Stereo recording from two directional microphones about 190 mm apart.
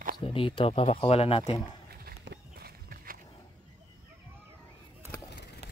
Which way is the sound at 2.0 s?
60° right (ahead or behind).